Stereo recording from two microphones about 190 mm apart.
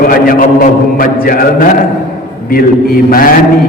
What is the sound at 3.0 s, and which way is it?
Speech, 50° left (ahead or behind).